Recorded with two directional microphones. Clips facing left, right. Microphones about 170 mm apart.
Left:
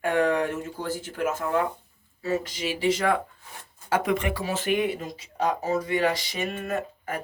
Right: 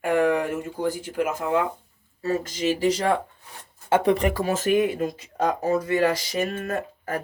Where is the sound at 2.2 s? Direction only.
45° right (ahead or behind).